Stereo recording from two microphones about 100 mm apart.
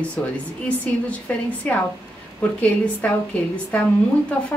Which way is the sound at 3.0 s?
15° left (ahead or behind).